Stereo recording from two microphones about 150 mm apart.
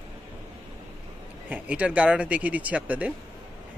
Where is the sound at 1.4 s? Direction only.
10° right (ahead or behind).